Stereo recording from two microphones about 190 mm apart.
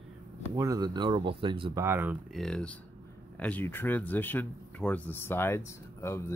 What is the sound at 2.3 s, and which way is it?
Speech, 5° left (ahead or behind).